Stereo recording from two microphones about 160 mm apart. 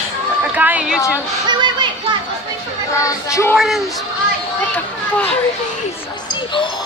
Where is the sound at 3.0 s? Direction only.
20° left (ahead or behind).